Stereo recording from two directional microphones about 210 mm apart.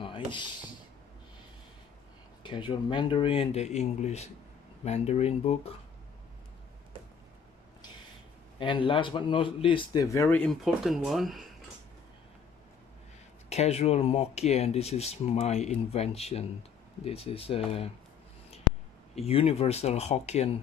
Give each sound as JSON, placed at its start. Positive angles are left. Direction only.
{"t": 0.0, "sound": "a sound", "side_deg": 25}
{"t": 2.4, "sound": "speech", "side_deg": 25}
{"t": 8.5, "sound": "speech", "side_deg": 25}
{"t": 13.5, "sound": "speech", "side_deg": 30}
{"t": 19.1, "sound": "speech", "side_deg": 30}